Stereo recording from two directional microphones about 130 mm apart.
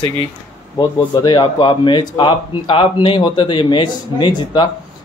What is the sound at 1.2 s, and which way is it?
A man's voice, 35° left (ahead or behind).